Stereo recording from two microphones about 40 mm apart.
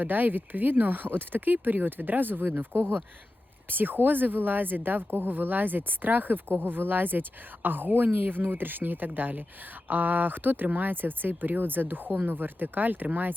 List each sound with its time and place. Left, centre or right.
0.0 s speech: right
2.7 s speech: right
3.7 s speech: right